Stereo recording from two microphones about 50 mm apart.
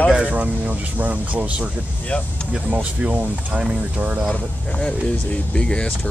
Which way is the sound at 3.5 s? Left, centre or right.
Centre.